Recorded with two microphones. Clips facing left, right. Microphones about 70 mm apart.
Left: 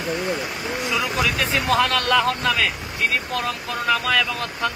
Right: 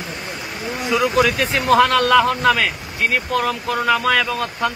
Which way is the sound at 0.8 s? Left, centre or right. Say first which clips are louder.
Right 7 dB; centre.